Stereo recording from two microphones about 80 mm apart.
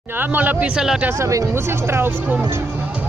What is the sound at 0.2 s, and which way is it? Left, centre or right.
Speech, right.